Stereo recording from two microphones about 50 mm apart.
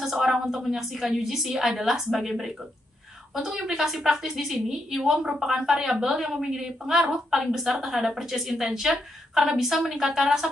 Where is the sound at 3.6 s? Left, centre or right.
Centre.